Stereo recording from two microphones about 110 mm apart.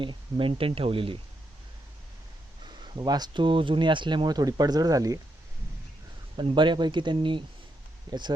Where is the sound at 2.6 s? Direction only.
40° right (ahead or behind).